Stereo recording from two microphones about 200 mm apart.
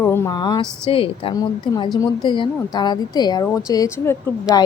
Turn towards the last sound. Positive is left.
turn(degrees=15)  # may be behind; listen again after turning